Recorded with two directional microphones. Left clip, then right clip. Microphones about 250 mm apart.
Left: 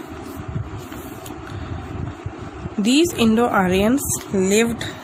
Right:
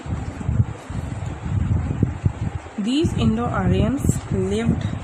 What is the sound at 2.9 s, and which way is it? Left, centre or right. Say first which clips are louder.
A woman's voice: left 5 dB; left.